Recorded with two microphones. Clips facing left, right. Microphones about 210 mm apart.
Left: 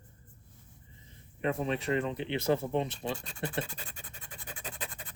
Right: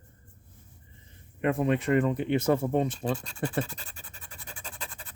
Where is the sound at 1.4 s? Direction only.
55° right (ahead or behind).